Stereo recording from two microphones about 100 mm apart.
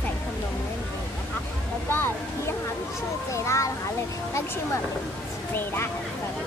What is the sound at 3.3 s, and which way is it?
Speech, 30° left (ahead or behind).